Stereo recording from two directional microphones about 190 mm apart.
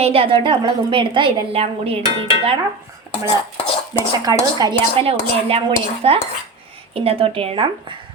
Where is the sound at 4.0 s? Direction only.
20° right (ahead or behind).